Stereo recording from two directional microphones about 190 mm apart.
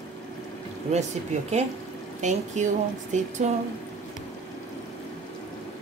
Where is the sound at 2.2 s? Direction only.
40° right (ahead or behind).